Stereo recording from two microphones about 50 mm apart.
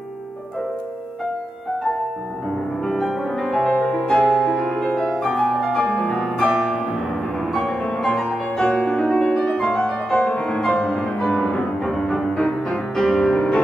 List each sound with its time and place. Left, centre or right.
3.0 s music: centre
3.9 s music: centre
4.2 s music: centre
7.6 s music: centre
11.2 s music: left
11.5 s music: centre